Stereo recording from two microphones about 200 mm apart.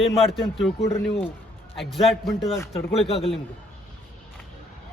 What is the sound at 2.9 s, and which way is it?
Speech, 30° left (ahead or behind).